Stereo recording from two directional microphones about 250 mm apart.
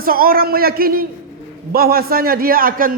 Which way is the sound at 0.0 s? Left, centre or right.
Right.